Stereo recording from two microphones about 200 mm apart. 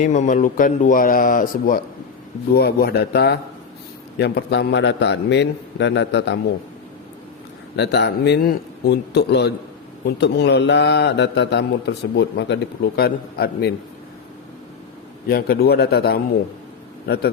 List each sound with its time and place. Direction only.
0.0 s a man's voice: 40° left (ahead or behind); by 6.4 s 60° left (ahead or behind)
7.8 s a man's voice: 55° left (ahead or behind)
15.3 s a man's voice: 50° left (ahead or behind)